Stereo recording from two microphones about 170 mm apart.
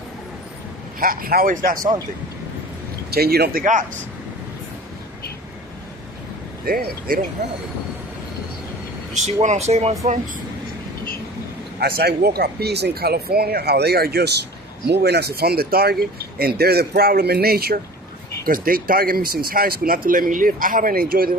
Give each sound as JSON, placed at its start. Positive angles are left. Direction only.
{"t": 0.9, "sound": "speech", "side_deg": -55}
{"t": 3.1, "sound": "speech", "side_deg": -70}
{"t": 6.7, "sound": "speech", "side_deg": -60}
{"t": 9.1, "sound": "speech", "side_deg": -45}
{"t": 11.8, "sound": "speech", "side_deg": -65}